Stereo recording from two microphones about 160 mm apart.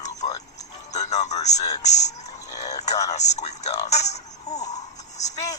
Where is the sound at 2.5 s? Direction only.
20° left (ahead or behind).